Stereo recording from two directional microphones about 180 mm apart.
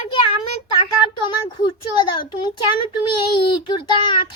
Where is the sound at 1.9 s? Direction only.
25° left (ahead or behind).